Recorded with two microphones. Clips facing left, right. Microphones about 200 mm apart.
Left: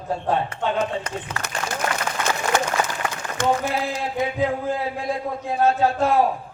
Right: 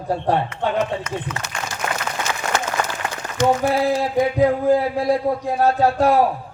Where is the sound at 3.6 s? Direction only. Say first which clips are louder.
Right 7 dB; 35° right (ahead or behind).